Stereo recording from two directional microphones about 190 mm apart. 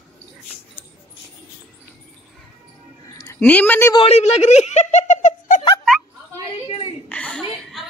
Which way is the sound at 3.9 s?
35° left (ahead or behind).